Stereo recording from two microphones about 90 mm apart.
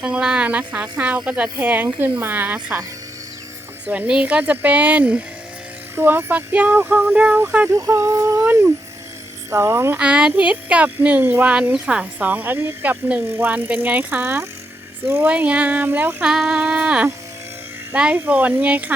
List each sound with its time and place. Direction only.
0.0 s speech: 10° right (ahead or behind)
3.8 s speech: 15° right (ahead or behind)
7.7 s a sound: 30° right (ahead or behind)
8.4 s speech: 25° right (ahead or behind)
10.0 s speech: 10° right (ahead or behind)
11.7 s speech: 10° right (ahead or behind); by 15.3 s 25° right (ahead or behind)
15.3 s speech: 15° right (ahead or behind)
16.2 s speech: 5° right (ahead or behind)